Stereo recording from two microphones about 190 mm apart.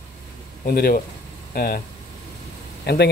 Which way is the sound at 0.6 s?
50° left (ahead or behind).